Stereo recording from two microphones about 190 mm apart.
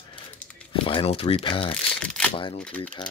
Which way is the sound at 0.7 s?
25° left (ahead or behind).